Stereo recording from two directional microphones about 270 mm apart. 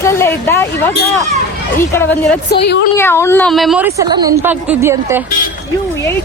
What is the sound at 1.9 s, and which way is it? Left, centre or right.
Speech, centre.